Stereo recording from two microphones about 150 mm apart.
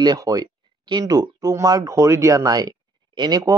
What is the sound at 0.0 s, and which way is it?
Speech, 25° right (ahead or behind).